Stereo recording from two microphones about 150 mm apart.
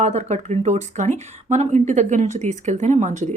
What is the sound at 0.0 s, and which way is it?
Speech, 50° right (ahead or behind).